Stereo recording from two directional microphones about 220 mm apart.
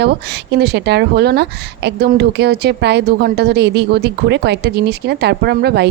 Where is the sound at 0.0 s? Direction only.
50° right (ahead or behind).